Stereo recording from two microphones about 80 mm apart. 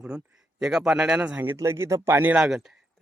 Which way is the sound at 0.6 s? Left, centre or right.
Centre.